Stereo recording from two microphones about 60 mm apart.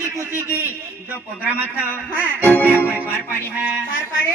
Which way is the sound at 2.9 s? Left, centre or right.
Right.